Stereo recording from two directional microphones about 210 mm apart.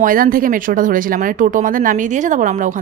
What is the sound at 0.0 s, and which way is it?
Speech, 40° right (ahead or behind).